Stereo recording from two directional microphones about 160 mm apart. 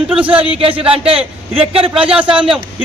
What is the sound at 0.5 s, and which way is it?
Speech, 35° right (ahead or behind).